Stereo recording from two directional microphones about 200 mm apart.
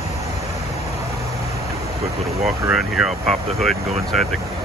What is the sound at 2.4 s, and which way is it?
Speech, centre (ahead or behind).